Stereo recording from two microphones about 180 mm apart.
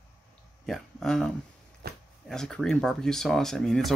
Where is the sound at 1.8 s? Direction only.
60° right (ahead or behind).